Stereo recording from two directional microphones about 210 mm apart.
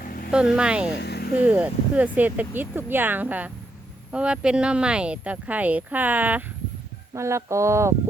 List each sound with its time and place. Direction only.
0.0 s vehicle: 40° left (ahead or behind)
0.3 s speech: 5° right (ahead or behind)
0.9 s vehicle: 50° left (ahead or behind)
1.4 s speech: 5° right (ahead or behind)